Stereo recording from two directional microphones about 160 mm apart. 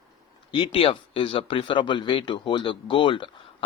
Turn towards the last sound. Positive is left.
turn(degrees=30)  # may be behind; listen again after turning